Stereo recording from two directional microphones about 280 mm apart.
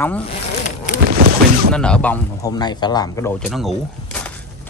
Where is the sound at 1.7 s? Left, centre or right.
Centre.